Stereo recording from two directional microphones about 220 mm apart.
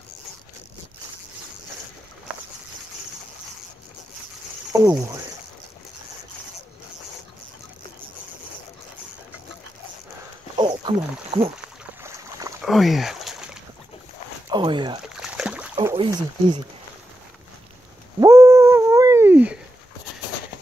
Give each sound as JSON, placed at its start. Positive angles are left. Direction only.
{"t": 4.7, "sound": "speech", "side_deg": -15}
{"t": 10.6, "sound": "wild animals", "side_deg": -25}
{"t": 12.0, "sound": "boat", "side_deg": -15}
{"t": 12.6, "sound": "speech", "side_deg": 0}
{"t": 14.5, "sound": "speech", "side_deg": -20}
{"t": 15.1, "sound": "boat", "side_deg": -5}
{"t": 15.7, "sound": "speech", "side_deg": -15}
{"t": 18.2, "sound": "a sound", "side_deg": -15}